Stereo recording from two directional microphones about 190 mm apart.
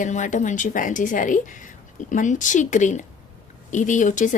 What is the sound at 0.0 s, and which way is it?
A woman's voice, 40° left (ahead or behind).